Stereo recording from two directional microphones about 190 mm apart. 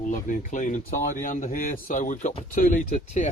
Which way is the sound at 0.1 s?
40° left (ahead or behind).